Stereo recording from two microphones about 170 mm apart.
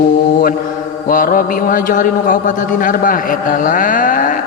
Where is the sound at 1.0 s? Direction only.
55° left (ahead or behind).